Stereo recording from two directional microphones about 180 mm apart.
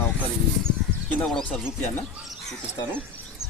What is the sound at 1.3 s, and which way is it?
Speech, centre (ahead or behind).